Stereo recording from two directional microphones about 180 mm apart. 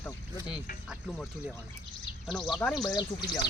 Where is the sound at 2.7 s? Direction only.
20° left (ahead or behind).